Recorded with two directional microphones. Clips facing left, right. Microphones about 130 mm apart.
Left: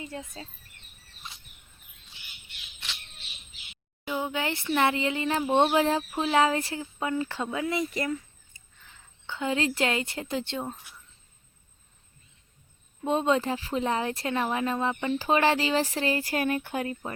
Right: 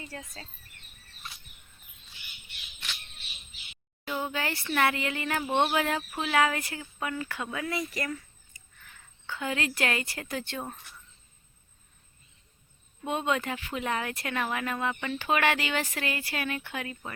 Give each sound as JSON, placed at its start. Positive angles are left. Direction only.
{"t": 0.0, "sound": "speech", "side_deg": 20}
{"t": 4.0, "sound": "a sound", "side_deg": 15}
{"t": 4.7, "sound": "speech", "side_deg": 20}
{"t": 13.1, "sound": "speech", "side_deg": 30}